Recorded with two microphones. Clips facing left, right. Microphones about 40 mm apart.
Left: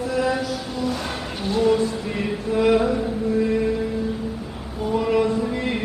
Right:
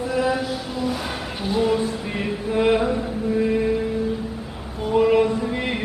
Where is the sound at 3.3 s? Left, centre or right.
Centre.